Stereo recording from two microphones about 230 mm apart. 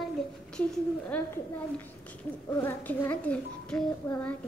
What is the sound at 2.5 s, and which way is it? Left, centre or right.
A child's voice, centre.